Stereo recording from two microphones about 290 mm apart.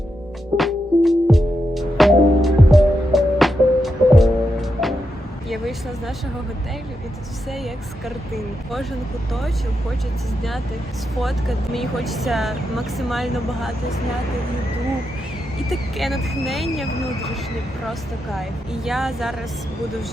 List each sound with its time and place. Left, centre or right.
0.5 s music: centre
5.5 s speech: centre
7.5 s speech: centre
11.1 s speech: centre
15.7 s speech: centre